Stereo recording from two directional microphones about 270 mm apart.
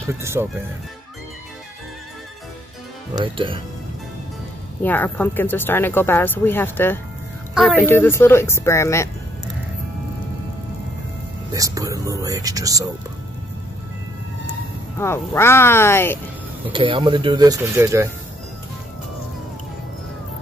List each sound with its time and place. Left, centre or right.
0.0 s speech: centre
3.2 s speech: centre
4.8 s speech: centre
11.5 s speech: centre
15.0 s speech: centre
16.7 s speech: centre